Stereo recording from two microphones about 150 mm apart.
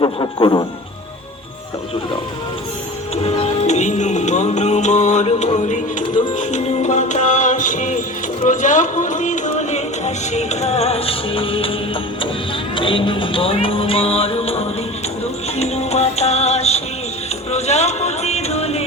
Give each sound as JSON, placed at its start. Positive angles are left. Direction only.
{"t": 0.0, "sound": "speech", "side_deg": 30}
{"t": 3.2, "sound": "music", "side_deg": 45}
{"t": 12.7, "sound": "music", "side_deg": 35}